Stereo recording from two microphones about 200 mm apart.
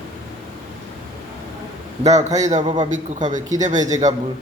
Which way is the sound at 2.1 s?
35° right (ahead or behind).